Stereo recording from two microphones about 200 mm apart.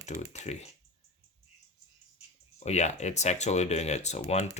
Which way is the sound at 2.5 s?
35° left (ahead or behind).